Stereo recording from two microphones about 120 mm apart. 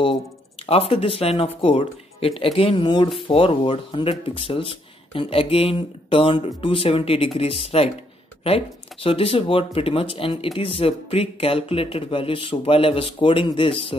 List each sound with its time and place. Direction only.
0.0 s speech: 50° left (ahead or behind)